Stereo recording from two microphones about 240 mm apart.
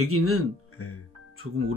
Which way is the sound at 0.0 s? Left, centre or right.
Right.